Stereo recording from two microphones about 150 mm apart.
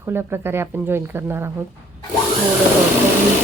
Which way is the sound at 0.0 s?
15° right (ahead or behind).